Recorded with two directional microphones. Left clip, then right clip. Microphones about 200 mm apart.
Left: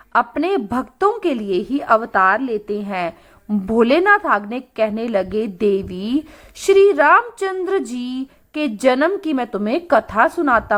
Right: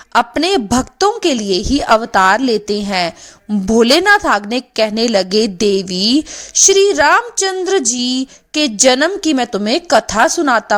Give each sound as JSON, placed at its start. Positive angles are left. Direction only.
{"t": 0.1, "sound": "a woman's voice", "side_deg": -50}